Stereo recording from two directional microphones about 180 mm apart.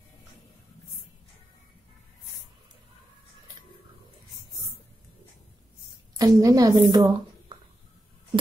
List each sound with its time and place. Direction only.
6.1 s a woman's voice: 20° right (ahead or behind)